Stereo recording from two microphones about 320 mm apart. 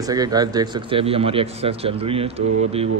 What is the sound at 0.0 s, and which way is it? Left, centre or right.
Speech, centre.